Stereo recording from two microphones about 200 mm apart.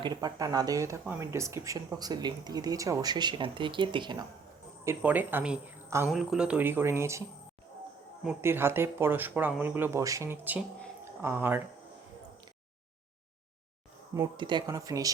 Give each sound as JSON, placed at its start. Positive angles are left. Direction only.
{"t": 0.0, "sound": "speech", "side_deg": -20}
{"t": 4.9, "sound": "speech", "side_deg": -10}
{"t": 14.1, "sound": "speech", "side_deg": -20}